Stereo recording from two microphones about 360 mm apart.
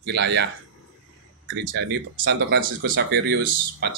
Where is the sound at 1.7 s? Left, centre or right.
Right.